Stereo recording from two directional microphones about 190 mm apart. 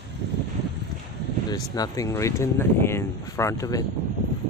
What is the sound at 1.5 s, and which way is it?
Speech, 20° left (ahead or behind).